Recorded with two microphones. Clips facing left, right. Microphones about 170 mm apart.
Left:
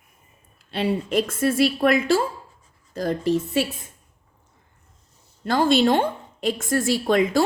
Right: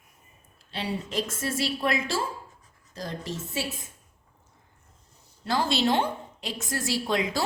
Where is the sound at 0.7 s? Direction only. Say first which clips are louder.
Left 9 dB; 55° left (ahead or behind).